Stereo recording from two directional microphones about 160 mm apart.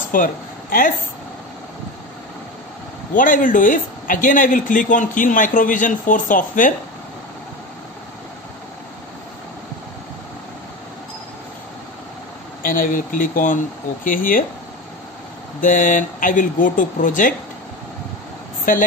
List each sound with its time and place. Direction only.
0.1 s speech: 60° left (ahead or behind)
3.2 s speech: 55° left (ahead or behind)
12.6 s speech: 60° left (ahead or behind)
15.6 s speech: 55° left (ahead or behind)